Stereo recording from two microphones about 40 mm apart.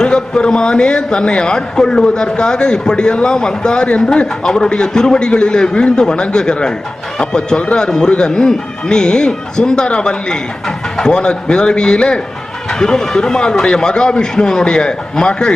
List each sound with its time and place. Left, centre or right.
0.0 s a man's voice: left